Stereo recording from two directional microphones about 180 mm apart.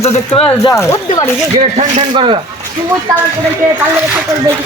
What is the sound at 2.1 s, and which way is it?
Speech, 30° right (ahead or behind).